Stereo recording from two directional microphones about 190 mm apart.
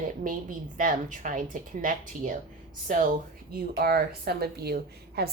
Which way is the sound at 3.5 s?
55° right (ahead or behind).